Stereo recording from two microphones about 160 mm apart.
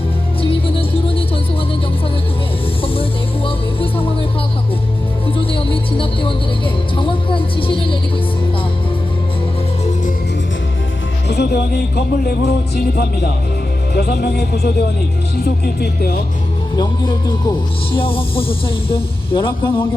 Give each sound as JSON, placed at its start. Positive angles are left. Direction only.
{"t": 0.8, "sound": "music", "side_deg": 35}
{"t": 2.8, "sound": "music", "side_deg": 35}
{"t": 6.9, "sound": "speech", "side_deg": 30}
{"t": 11.3, "sound": "music", "side_deg": 85}
{"t": 13.9, "sound": "speech", "side_deg": 85}
{"t": 15.4, "sound": "music", "side_deg": 80}
{"t": 16.7, "sound": "speech", "side_deg": 30}